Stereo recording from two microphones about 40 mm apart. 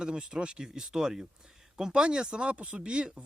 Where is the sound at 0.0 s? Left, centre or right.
Centre.